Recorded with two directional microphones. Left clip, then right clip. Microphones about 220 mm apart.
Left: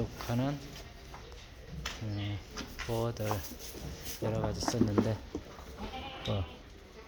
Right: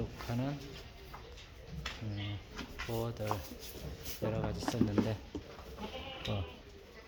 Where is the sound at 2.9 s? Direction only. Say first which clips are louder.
Left 4 dB; 10° left (ahead or behind).